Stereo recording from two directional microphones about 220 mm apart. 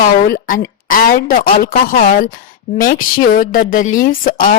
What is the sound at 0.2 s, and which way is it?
Speech, 40° left (ahead or behind).